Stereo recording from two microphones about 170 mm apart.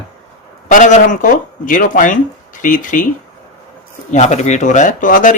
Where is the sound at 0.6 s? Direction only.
50° left (ahead or behind).